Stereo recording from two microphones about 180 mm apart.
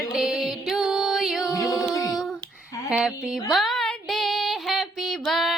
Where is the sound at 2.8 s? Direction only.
5° right (ahead or behind).